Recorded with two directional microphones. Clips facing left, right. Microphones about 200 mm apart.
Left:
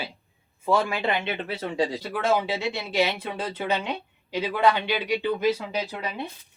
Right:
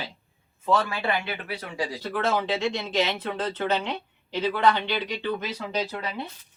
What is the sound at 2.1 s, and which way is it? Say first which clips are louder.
Speech: left 1 dB; 10° left (ahead or behind).